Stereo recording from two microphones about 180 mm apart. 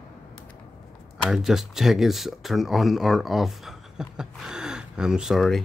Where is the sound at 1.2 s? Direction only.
Centre (ahead or behind).